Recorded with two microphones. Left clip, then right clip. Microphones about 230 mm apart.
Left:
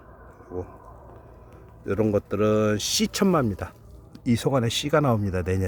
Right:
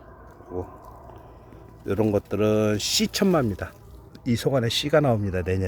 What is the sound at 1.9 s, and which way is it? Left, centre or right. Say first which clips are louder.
Speech: even; centre.